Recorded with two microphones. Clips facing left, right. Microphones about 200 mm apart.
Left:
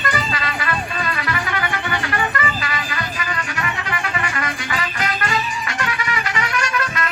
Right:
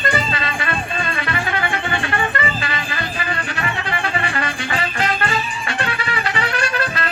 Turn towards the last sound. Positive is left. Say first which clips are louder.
# right 1 dB
turn(degrees=-30)  # may be behind; listen again after turning